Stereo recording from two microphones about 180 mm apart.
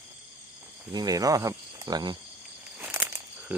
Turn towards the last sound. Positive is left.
turn(degrees=-10)  # may be behind; listen again after turning